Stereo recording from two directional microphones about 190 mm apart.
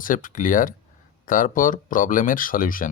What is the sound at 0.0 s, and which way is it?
Speech, 45° left (ahead or behind).